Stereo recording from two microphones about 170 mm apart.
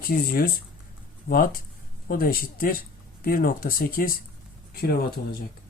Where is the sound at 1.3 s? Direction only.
55° left (ahead or behind).